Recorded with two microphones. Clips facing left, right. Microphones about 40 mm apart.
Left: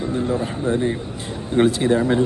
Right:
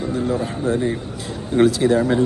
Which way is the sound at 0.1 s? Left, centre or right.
Left.